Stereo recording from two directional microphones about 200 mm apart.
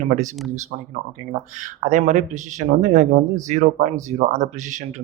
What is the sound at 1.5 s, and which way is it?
Speech, 40° right (ahead or behind).